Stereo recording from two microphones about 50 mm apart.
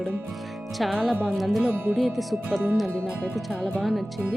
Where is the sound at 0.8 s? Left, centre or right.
Centre.